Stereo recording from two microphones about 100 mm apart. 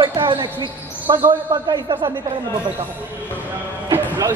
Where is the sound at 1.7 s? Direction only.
50° right (ahead or behind).